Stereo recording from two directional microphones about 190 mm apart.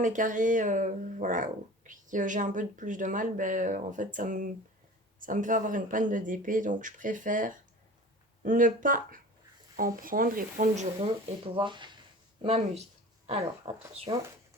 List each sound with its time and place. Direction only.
0.0 s speech: 45° right (ahead or behind)
11.5 s speech: 25° right (ahead or behind)